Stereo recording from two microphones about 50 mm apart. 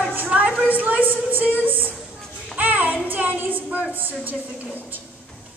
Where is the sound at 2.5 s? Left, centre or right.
Right.